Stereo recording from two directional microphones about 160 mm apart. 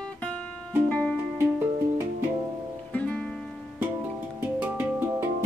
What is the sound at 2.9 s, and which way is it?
Music, 5° left (ahead or behind).